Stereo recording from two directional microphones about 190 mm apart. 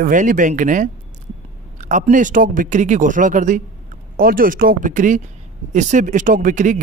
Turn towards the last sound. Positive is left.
turn(degrees=-40)  # may be behind; listen again after turning